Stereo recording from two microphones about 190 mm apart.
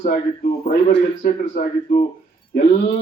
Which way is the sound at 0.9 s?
40° left (ahead or behind).